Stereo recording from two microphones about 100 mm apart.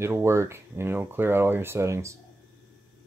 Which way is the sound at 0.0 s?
25° right (ahead or behind).